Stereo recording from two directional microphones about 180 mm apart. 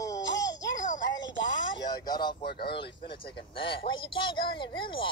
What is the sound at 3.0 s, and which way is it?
Speech, 30° left (ahead or behind).